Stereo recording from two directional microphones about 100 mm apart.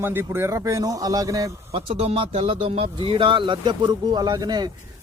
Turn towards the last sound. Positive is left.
turn(degrees=-40)  # may be behind; listen again after turning